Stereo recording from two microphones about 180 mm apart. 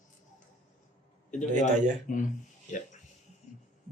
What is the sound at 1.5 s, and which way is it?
Speech, 45° right (ahead or behind).